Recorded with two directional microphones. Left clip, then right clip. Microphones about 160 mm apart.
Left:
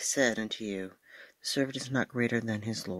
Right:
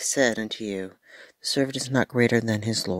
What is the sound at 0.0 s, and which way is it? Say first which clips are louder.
Speech: right 5 dB; 40° right (ahead or behind).